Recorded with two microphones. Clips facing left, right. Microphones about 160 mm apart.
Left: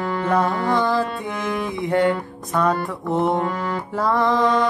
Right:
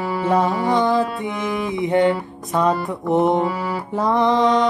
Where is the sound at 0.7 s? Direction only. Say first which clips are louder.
Right 2 dB; 20° right (ahead or behind).